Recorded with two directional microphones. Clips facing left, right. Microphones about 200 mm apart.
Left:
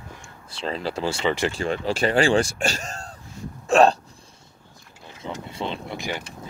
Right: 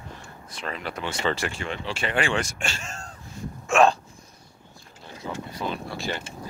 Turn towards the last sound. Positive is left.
turn(degrees=20)  # may be behind; listen again after turning